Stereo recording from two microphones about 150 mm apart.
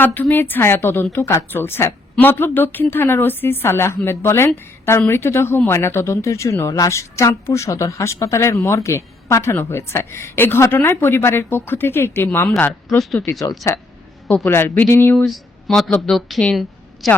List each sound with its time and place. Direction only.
0.0 s speech: 15° left (ahead or behind)
13.0 s speech: centre (ahead or behind)
13.5 s speech: 25° left (ahead or behind)
15.2 s speech: centre (ahead or behind)